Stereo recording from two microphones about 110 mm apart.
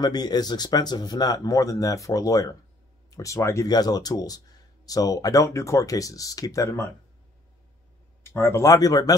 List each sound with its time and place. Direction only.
0.0 s speech: 40° left (ahead or behind)
8.3 s speech: 25° left (ahead or behind)